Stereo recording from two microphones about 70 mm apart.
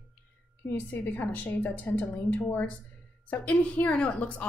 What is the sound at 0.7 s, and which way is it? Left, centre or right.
A woman's voice, left.